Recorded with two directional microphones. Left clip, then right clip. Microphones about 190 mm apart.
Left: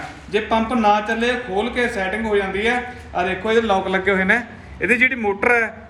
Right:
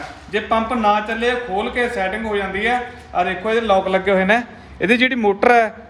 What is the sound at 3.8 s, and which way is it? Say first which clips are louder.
A man's voice: right 2 dB; 50° right (ahead or behind).